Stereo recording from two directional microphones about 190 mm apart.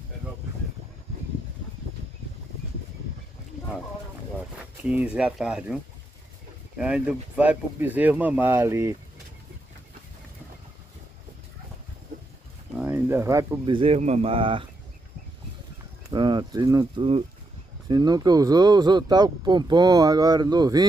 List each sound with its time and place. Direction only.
4.8 s speech: 5° right (ahead or behind)
6.8 s speech: 5° right (ahead or behind)
12.7 s a sound: 10° right (ahead or behind)
13.7 s speech: 30° right (ahead or behind)
16.1 s speech: 25° right (ahead or behind)